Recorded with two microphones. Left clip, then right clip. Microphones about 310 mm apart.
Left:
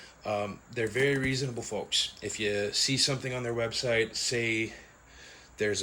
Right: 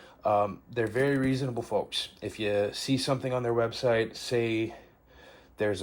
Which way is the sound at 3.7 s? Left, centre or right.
Right.